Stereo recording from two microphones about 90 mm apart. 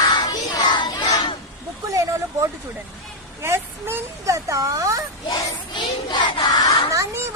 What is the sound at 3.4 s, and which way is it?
Speech, 30° right (ahead or behind).